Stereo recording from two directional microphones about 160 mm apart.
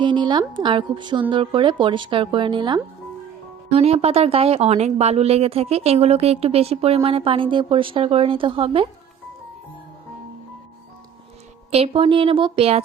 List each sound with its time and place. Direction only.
0.0 s a woman's voice: 30° right (ahead or behind)
11.7 s speech: 35° right (ahead or behind)